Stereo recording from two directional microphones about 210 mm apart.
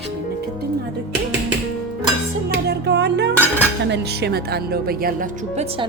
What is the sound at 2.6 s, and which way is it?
A woman's voice, 55° right (ahead or behind).